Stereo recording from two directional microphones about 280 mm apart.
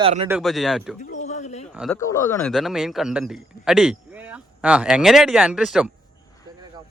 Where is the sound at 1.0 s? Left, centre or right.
Left.